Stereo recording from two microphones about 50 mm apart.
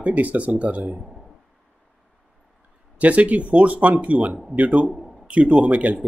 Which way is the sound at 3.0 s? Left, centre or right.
Right.